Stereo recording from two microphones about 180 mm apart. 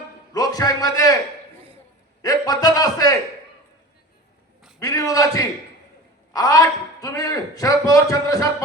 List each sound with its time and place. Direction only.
0.3 s a man's voice: 20° left (ahead or behind)
2.2 s a man's voice: 20° left (ahead or behind)
4.8 s a man's voice: 20° left (ahead or behind)